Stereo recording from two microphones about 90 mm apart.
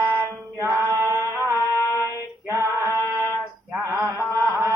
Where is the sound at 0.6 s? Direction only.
30° right (ahead or behind).